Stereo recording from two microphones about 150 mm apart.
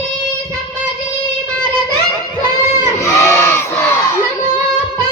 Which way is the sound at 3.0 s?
15° left (ahead or behind).